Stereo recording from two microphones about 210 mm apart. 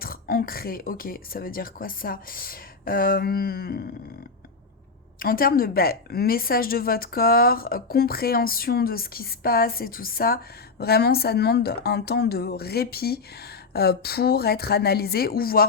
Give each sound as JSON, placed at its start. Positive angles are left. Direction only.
{"t": 0.0, "sound": "speech", "side_deg": 45}
{"t": 5.2, "sound": "speech", "side_deg": 45}